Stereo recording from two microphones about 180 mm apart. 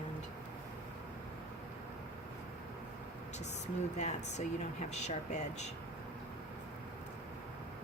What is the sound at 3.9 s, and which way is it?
A woman's voice, 40° left (ahead or behind).